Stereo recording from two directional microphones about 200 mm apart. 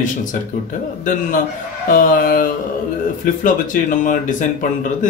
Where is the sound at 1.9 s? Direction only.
45° left (ahead or behind).